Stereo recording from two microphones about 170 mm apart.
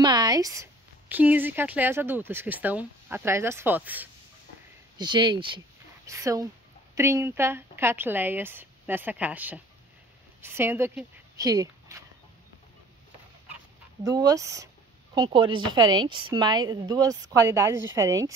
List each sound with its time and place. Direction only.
0.0 s a woman's voice: 25° right (ahead or behind)
4.9 s a woman's voice: 25° right (ahead or behind)
14.0 s a woman's voice: 20° right (ahead or behind)